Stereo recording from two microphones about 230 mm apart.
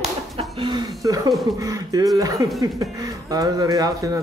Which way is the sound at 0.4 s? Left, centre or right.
Right.